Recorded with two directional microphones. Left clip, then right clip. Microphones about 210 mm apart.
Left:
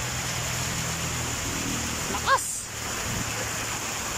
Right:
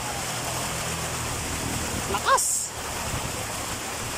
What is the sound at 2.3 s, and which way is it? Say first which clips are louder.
Speech: right 2 dB; 15° right (ahead or behind).